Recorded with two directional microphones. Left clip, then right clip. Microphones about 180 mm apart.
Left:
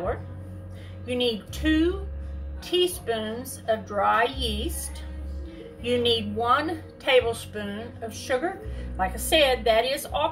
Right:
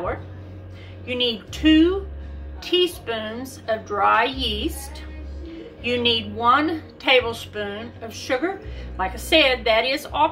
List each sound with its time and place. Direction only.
1.0 s a woman's voice: 10° right (ahead or behind)
5.8 s a woman's voice: 5° right (ahead or behind)